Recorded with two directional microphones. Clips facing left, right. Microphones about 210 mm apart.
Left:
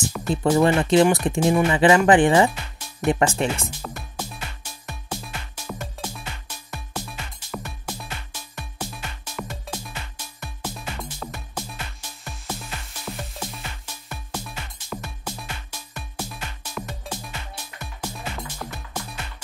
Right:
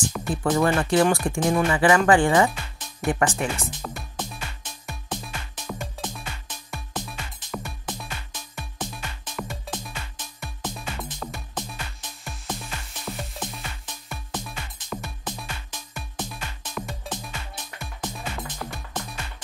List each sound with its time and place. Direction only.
0.0 s music: 5° left (ahead or behind)
0.5 s speech: 20° left (ahead or behind)
1.4 s speech: 10° left (ahead or behind)
1.7 s speech: 20° left (ahead or behind)
3.8 s music: 5° left (ahead or behind)